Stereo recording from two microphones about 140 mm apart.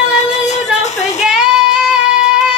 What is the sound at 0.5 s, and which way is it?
Music, 55° left (ahead or behind).